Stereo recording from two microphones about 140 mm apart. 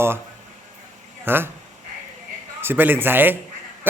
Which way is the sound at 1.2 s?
15° right (ahead or behind).